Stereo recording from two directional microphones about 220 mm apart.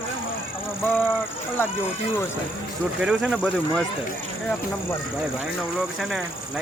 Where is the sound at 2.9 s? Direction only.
5° right (ahead or behind).